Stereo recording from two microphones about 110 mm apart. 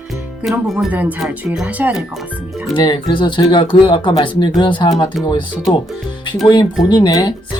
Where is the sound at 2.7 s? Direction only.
40° left (ahead or behind).